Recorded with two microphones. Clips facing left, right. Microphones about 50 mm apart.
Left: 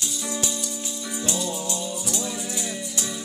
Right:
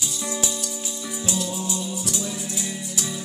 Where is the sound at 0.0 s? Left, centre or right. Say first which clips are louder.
Right 1 dB; centre.